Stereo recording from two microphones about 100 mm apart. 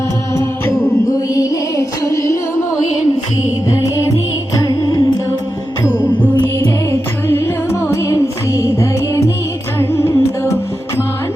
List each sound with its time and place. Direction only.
1.0 s music: 35° left (ahead or behind)
3.7 s music: 30° left (ahead or behind)
5.9 s music: 20° left (ahead or behind)